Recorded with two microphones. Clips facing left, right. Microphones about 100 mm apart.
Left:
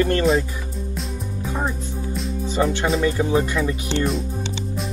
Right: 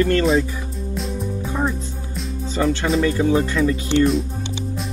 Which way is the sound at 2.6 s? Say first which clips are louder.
Right 1 dB; 15° left (ahead or behind).